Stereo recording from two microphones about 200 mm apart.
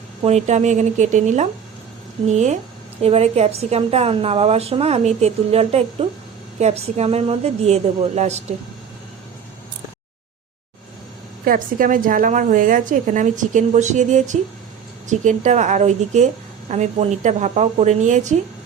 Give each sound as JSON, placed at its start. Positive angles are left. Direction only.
{"t": 0.2, "sound": "a woman's voice", "side_deg": -35}
{"t": 11.4, "sound": "a woman's voice", "side_deg": -45}